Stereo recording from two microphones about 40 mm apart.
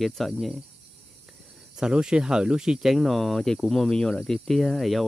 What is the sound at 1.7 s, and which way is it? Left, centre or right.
Speech, centre.